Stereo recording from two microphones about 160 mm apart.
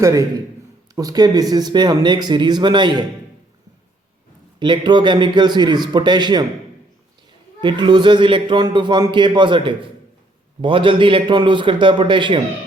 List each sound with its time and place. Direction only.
0.0 s speech: 20° right (ahead or behind)
4.6 s speech: 30° right (ahead or behind)
7.6 s a man's voice: 30° right (ahead or behind)